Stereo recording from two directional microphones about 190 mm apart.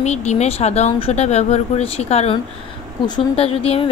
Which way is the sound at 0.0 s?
35° left (ahead or behind).